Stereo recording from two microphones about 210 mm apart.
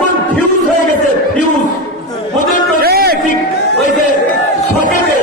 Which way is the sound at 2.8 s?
50° right (ahead or behind).